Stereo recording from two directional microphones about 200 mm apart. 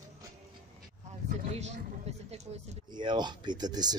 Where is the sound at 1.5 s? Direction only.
35° right (ahead or behind).